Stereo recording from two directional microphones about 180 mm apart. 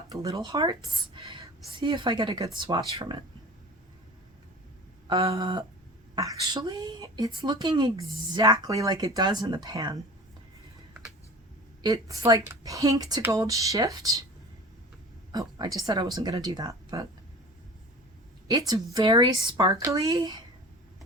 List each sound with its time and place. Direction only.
0.1 s a woman's voice: 20° right (ahead or behind)
5.0 s a sound: 20° right (ahead or behind)
5.3 s a woman's voice: 25° right (ahead or behind)
11.8 s a woman's voice: 20° right (ahead or behind)
15.3 s a woman's voice: 25° right (ahead or behind)
18.4 s a woman's voice: 20° right (ahead or behind)